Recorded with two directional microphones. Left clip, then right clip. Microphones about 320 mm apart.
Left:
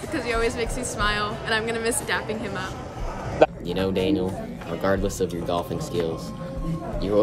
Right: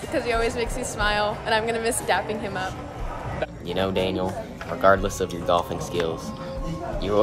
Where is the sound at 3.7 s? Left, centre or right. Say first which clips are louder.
Left 1 dB; centre.